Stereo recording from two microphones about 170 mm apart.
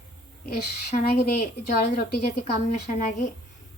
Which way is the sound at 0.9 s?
35° left (ahead or behind).